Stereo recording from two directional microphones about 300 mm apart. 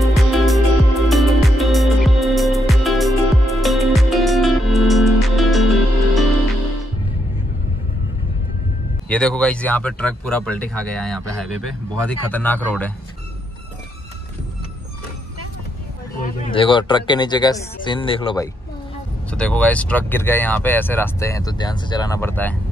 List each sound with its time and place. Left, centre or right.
0.0 s music: centre
9.1 s speech: centre
16.2 s speech: centre
19.3 s speech: centre